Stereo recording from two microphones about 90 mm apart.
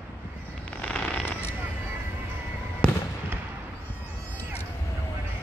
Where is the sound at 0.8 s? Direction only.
15° left (ahead or behind).